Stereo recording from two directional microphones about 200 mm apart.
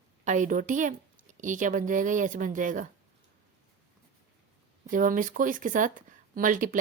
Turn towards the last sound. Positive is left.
turn(degrees=-40)  # may be behind; listen again after turning